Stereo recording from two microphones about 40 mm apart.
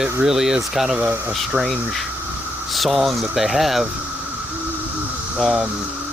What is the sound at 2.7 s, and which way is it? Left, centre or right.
Speech, centre.